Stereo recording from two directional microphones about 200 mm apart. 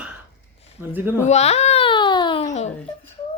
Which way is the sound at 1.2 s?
35° left (ahead or behind).